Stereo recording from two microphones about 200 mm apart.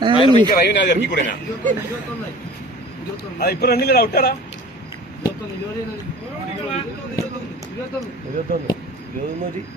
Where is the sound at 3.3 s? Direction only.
50° left (ahead or behind).